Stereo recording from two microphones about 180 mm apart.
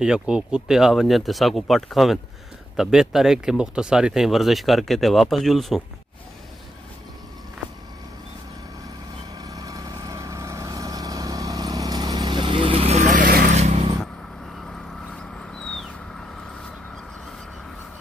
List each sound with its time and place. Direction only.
0.0 s speech: 5° right (ahead or behind)
9.4 s vehicle: 20° right (ahead or behind); by 13.5 s 50° right (ahead or behind)
13.5 s vehicle: 40° right (ahead or behind)
14.7 s vehicle: 5° left (ahead or behind)